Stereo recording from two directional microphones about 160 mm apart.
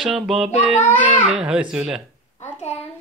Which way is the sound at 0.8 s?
10° left (ahead or behind).